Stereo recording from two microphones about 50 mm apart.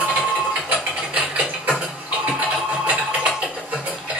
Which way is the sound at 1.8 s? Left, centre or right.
Right.